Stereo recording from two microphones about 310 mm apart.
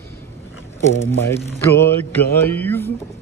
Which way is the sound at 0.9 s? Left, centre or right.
Centre.